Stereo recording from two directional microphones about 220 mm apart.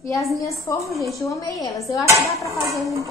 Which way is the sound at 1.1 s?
15° left (ahead or behind).